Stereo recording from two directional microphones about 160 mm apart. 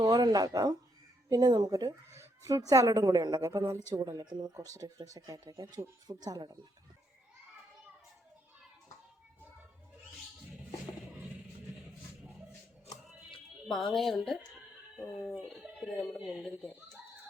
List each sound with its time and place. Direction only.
0.0 s speech: 25° right (ahead or behind)
13.1 s music: centre (ahead or behind)
14.3 s a sound: centre (ahead or behind)
16.0 s speech: 25° left (ahead or behind)
16.2 s a child's voice: centre (ahead or behind)